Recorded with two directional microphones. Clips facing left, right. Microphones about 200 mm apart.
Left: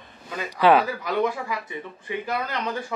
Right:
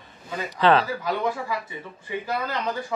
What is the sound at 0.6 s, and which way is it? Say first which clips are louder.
Speech: left 2 dB; 10° left (ahead or behind).